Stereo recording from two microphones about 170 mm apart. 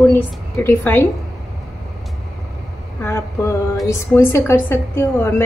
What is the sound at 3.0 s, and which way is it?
A woman's voice, 15° left (ahead or behind).